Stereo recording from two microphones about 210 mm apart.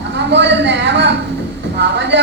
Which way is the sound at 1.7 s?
55° right (ahead or behind).